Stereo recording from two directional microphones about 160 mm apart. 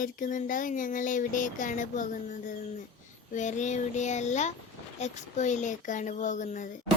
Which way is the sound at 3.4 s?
50° left (ahead or behind).